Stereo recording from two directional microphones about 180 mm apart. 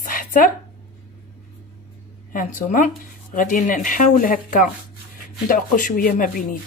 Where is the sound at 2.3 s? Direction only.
50° left (ahead or behind).